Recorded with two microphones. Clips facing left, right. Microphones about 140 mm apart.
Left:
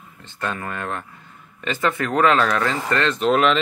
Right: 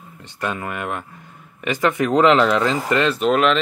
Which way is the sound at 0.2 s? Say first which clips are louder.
Right 2 dB; 15° right (ahead or behind).